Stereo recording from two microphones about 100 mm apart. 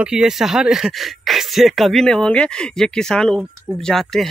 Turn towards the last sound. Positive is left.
turn(degrees=5)  # may be behind; listen again after turning